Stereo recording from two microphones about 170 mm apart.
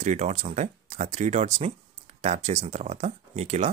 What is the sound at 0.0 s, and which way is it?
Speech, 40° right (ahead or behind).